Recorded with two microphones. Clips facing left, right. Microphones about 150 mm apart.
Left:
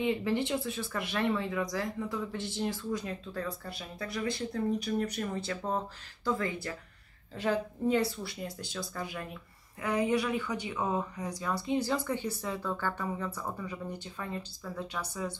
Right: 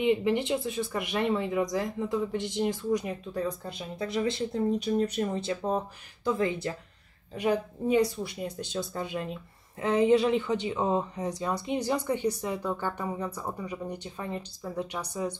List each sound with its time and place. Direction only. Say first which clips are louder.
0.0 s speech: right 4 dB; 20° right (ahead or behind)